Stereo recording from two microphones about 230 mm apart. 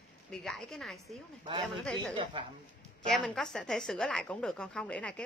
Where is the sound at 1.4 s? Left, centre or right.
Right.